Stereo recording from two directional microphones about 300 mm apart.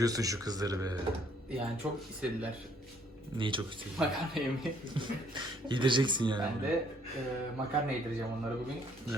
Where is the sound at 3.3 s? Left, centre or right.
Centre.